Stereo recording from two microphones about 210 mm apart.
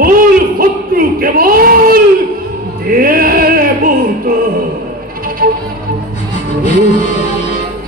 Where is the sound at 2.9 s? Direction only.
45° right (ahead or behind).